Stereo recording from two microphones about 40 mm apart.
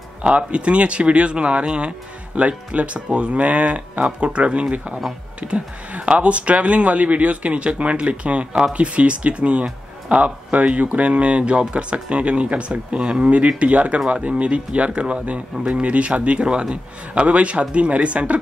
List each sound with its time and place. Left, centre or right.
0.4 s speech: right